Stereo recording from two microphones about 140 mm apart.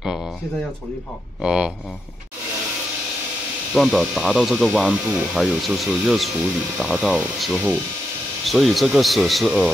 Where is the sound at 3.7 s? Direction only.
Centre (ahead or behind).